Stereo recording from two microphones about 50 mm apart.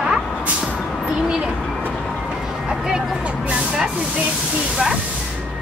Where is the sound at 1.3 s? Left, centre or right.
Centre.